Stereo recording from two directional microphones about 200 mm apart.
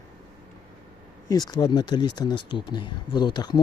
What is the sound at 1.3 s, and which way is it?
Speech, 20° left (ahead or behind).